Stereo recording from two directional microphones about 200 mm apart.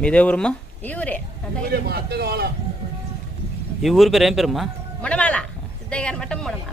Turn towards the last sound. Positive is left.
turn(degrees=5)  # may be behind; listen again after turning